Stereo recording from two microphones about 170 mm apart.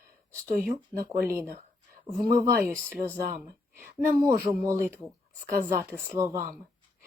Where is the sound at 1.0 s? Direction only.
15° right (ahead or behind).